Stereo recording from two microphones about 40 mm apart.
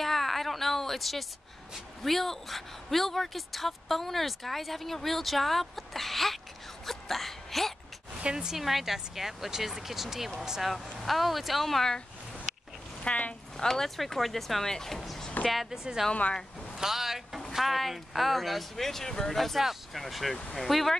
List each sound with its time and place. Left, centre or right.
0.0 s a sound: centre
2.0 s a woman's voice: centre
6.9 s a sound: centre
8.2 s speech: right
8.5 s a woman's voice: centre
13.0 s speech: left
13.6 s a woman's voice: centre
15.7 s speech: centre
16.1 s speech: left
16.7 s a woman's voice: centre